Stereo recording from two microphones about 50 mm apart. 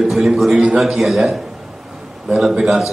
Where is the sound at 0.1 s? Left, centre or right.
Centre.